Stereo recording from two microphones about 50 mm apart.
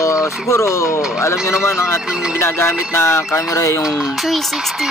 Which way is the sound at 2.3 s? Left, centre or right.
Left.